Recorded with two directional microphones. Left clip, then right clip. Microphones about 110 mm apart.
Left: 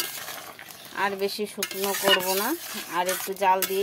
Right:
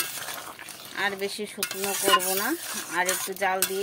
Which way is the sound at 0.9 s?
25° left (ahead or behind).